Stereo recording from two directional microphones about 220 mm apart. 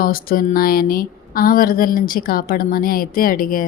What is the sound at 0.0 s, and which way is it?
A woman's voice, 40° left (ahead or behind).